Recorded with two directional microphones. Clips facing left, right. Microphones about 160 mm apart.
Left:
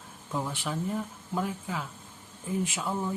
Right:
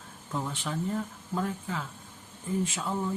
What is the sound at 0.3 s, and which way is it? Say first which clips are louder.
Speech: left 1 dB; 5° left (ahead or behind).